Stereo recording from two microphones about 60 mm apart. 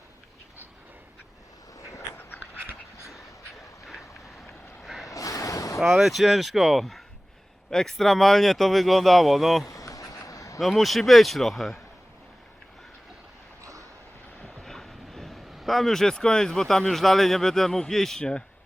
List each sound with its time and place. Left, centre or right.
4.8 s vehicle: centre
5.1 s a sound: left
5.8 s speech: centre
9.6 s a sound: left
10.6 s speech: centre
14.6 s speech: centre